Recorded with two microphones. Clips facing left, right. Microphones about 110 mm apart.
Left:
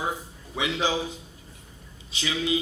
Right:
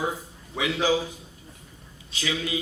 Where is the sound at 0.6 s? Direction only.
20° left (ahead or behind).